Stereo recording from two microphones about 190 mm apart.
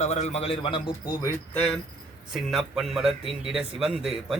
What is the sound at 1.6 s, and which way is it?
A man's voice, 5° left (ahead or behind).